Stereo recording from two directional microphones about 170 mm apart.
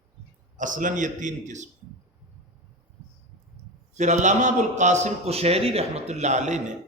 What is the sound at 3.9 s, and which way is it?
A man's voice, 45° right (ahead or behind).